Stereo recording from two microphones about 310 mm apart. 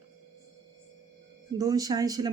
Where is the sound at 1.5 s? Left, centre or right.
Centre.